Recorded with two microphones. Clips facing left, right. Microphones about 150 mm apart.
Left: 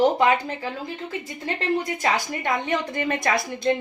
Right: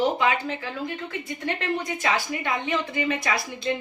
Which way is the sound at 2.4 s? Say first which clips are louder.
Left 2 dB; 50° left (ahead or behind).